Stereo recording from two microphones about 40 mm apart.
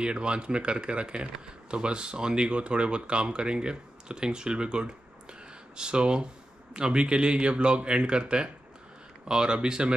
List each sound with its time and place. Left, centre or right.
0.0 s speech: right